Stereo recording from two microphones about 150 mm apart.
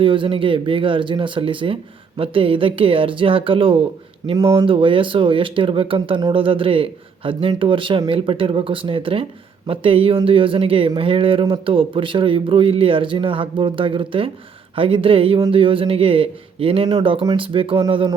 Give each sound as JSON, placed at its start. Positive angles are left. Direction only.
{"t": 0.0, "sound": "speech", "side_deg": -35}